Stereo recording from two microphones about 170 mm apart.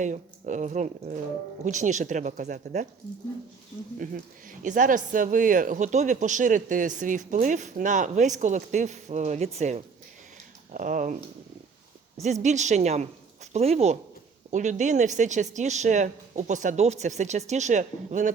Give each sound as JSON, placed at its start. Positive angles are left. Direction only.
{"t": 0.0, "sound": "speech", "side_deg": -45}
{"t": 3.9, "sound": "speech", "side_deg": -50}
{"t": 10.7, "sound": "speech", "side_deg": -50}
{"t": 12.2, "sound": "speech", "side_deg": -45}